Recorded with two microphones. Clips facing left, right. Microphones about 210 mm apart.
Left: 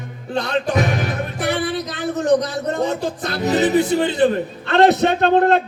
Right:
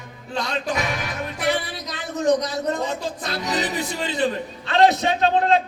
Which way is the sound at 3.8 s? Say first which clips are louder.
Left 8 dB; 60° left (ahead or behind).